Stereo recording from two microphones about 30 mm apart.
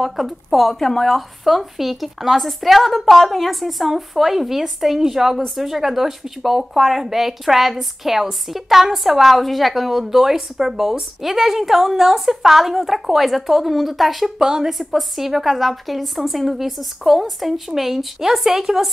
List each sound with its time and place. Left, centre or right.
0.0 s a woman's voice: centre
0.7 s speech: centre
1.0 s a woman's voice: centre
14.4 s a woman's voice: right
14.7 s speech: centre